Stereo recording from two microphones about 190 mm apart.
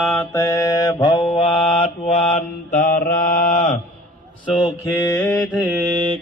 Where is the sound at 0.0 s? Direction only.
5° left (ahead or behind); by 3.7 s 40° left (ahead or behind).